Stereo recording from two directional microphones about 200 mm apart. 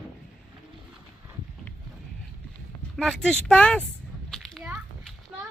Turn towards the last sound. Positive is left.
turn(degrees=0)  # may be behind; listen again after turning